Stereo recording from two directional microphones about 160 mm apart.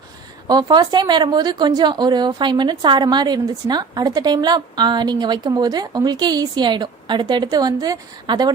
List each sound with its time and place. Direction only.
0.4 s a woman's voice: 25° right (ahead or behind)